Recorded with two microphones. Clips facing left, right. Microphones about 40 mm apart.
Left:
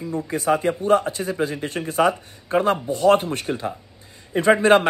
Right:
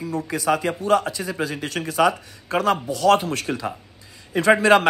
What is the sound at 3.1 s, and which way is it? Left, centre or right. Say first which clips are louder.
Speech: left 1 dB; left.